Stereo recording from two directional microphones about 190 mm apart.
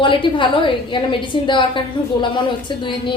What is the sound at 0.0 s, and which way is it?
A woman's voice, 25° left (ahead or behind).